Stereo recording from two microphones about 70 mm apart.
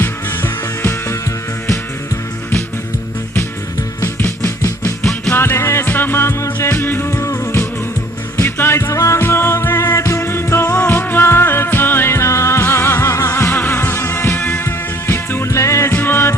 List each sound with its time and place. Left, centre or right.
0.0 s music: left
4.2 s music: left
8.9 s music: left
9.2 s music: left
14.3 s music: left
14.6 s music: left
15.9 s music: left